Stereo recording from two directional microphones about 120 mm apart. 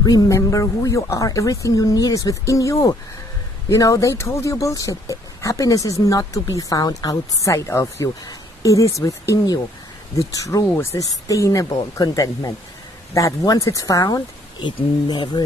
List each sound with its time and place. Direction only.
0.0 s speech: 30° left (ahead or behind)